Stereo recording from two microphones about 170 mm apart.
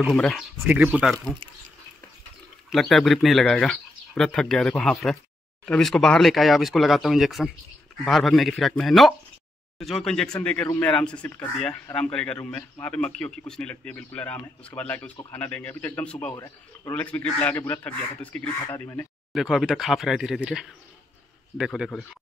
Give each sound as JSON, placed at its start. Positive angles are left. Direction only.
{"t": 0.1, "sound": "speech", "side_deg": 0}
{"t": 2.7, "sound": "speech", "side_deg": 0}
{"t": 16.3, "sound": "a man's voice", "side_deg": 20}
{"t": 16.9, "sound": "speech", "side_deg": 10}
{"t": 19.3, "sound": "speech", "side_deg": 0}